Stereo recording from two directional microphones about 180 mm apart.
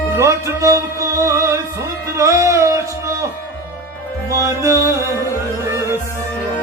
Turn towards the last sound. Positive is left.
turn(degrees=-15)  # may be behind; listen again after turning